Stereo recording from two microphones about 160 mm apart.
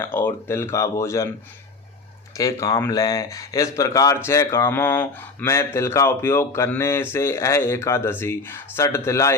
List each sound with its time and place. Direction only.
0.0 s speech: 15° left (ahead or behind)
2.3 s speech: 20° left (ahead or behind)